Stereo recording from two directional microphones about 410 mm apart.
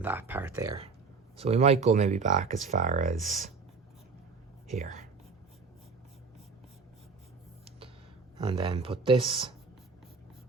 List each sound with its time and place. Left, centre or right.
0.0 s speech: centre
4.7 s speech: centre
8.4 s speech: centre